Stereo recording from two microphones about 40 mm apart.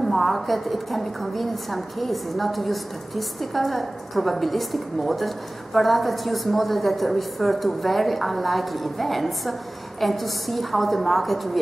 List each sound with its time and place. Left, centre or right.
0.0 s a woman's voice: centre